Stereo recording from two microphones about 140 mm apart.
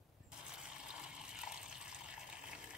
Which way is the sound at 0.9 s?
5° right (ahead or behind).